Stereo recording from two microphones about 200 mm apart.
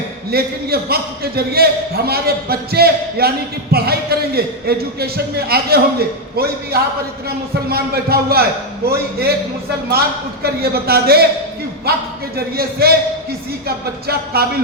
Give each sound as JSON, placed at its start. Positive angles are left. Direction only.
{"t": 0.3, "sound": "a man's voice", "side_deg": -50}
{"t": 10.4, "sound": "a man's voice", "side_deg": -50}
{"t": 12.5, "sound": "a man's voice", "side_deg": -50}